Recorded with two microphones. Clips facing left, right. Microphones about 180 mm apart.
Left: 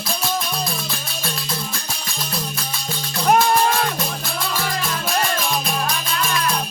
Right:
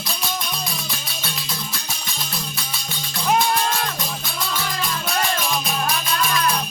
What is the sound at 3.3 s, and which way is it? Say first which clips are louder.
Livestock: left 4 dB; 55° left (ahead or behind).